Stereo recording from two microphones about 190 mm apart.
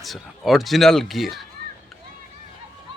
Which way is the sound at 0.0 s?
Centre (ahead or behind).